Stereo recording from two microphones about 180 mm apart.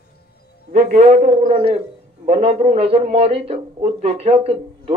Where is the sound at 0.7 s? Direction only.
40° right (ahead or behind).